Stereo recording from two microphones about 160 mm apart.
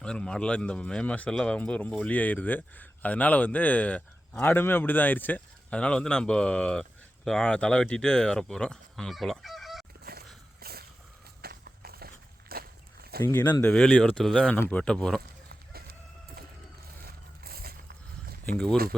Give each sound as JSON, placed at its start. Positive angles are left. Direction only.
{"t": 0.0, "sound": "speech", "side_deg": 5}
{"t": 10.0, "sound": "a sound", "side_deg": -75}
{"t": 11.4, "sound": "walk", "side_deg": -75}
{"t": 13.2, "sound": "speech", "side_deg": 10}
{"t": 15.7, "sound": "chicken", "side_deg": -70}
{"t": 17.1, "sound": "vehicle", "side_deg": -70}